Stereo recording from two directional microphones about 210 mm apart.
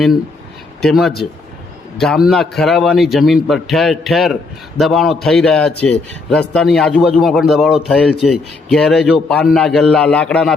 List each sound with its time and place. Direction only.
0.8 s a man's voice: centre (ahead or behind)